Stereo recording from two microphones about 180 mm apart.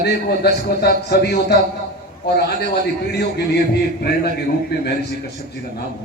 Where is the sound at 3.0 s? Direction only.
65° left (ahead or behind).